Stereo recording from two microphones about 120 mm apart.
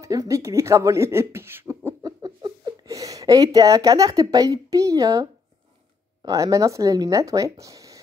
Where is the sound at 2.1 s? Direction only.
35° right (ahead or behind).